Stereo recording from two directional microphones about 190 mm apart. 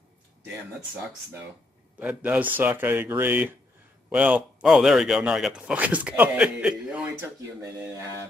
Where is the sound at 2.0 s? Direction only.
10° right (ahead or behind).